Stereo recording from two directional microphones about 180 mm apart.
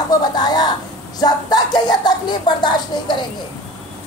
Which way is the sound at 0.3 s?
20° left (ahead or behind).